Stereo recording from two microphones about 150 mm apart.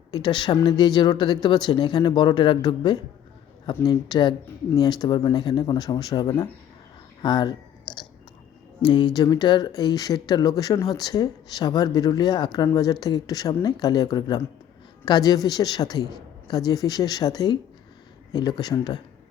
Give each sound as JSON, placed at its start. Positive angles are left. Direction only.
{"t": 0.1, "sound": "speech", "side_deg": 30}
{"t": 8.8, "sound": "speech", "side_deg": 30}